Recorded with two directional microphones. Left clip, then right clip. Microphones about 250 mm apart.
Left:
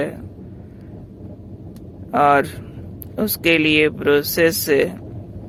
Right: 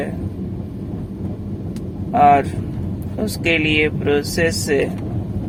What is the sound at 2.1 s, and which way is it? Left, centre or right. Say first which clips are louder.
Speech: right 2 dB; left.